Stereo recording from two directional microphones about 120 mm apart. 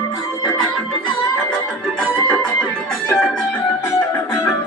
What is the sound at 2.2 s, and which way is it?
Music, 10° left (ahead or behind).